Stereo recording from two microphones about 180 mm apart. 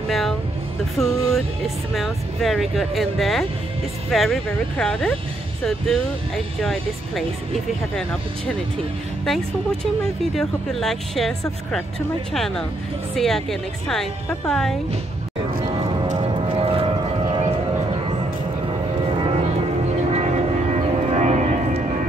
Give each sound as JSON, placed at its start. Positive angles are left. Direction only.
{"t": 0.1, "sound": "music", "side_deg": 0}
{"t": 0.9, "sound": "vehicle", "side_deg": 0}
{"t": 2.0, "sound": "speech", "side_deg": 0}
{"t": 9.2, "sound": "speech", "side_deg": 0}
{"t": 15.8, "sound": "music", "side_deg": -30}
{"t": 19.0, "sound": "music", "side_deg": -30}
{"t": 20.1, "sound": "vehicle", "side_deg": -35}